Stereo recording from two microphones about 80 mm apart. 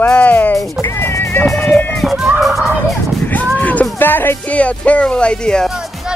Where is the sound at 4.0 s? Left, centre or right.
Left.